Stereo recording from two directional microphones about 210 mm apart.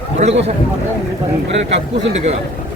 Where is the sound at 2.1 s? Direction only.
30° right (ahead or behind).